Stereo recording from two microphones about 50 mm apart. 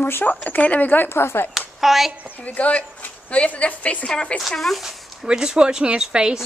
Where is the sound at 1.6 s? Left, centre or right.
Centre.